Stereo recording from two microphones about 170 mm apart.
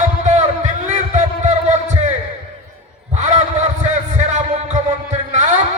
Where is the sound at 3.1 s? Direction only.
45° right (ahead or behind).